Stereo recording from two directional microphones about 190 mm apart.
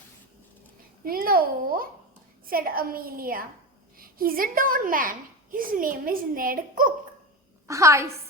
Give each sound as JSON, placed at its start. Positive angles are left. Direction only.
{"t": 1.0, "sound": "a child's voice", "side_deg": -50}
{"t": 7.7, "sound": "a woman's voice", "side_deg": -15}